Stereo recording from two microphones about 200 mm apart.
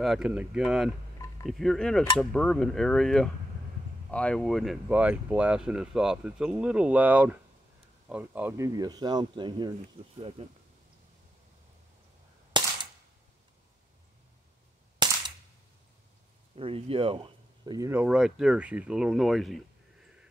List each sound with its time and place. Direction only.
0.0 s speech: centre (ahead or behind); by 10.3 s 25° right (ahead or behind)
12.6 s cap gun: 20° right (ahead or behind)
15.0 s cap gun: 20° right (ahead or behind)
16.5 s speech: 25° right (ahead or behind)
18.0 s speech: 5° right (ahead or behind)